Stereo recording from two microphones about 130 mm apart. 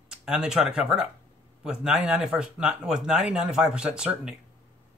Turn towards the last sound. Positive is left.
turn(degrees=-5)  # may be behind; listen again after turning